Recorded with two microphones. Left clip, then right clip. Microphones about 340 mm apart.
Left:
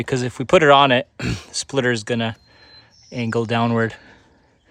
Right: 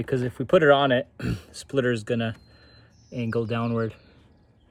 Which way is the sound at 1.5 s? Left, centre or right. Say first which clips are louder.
Left 5 dB; left.